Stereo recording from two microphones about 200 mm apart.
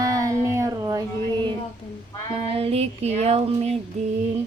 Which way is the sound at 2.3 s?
30° right (ahead or behind).